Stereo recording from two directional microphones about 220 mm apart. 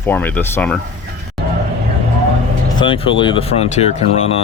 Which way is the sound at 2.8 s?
20° left (ahead or behind).